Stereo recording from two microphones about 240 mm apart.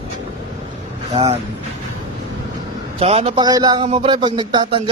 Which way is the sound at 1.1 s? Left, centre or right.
Right.